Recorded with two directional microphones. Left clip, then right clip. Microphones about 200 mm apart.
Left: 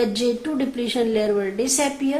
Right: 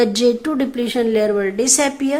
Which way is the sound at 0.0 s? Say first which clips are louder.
Right 6 dB; 35° right (ahead or behind).